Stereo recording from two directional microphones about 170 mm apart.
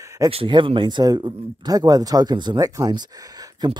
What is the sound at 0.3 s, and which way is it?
Speech, 30° right (ahead or behind).